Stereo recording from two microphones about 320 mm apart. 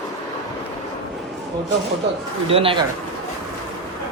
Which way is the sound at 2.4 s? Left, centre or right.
Centre.